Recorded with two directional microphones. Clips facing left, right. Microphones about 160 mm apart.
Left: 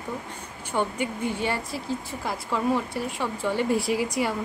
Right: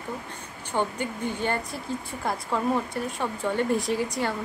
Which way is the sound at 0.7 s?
20° right (ahead or behind).